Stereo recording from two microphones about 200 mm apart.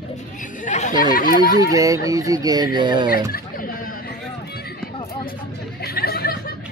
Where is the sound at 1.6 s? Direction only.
15° right (ahead or behind).